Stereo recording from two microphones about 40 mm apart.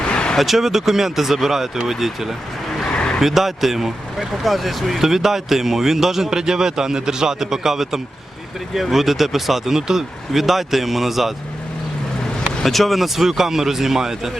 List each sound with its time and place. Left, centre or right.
0.1 s vehicle: left
0.3 s speech: centre
2.9 s vehicle: left
3.2 s speech: centre
12.5 s speech: centre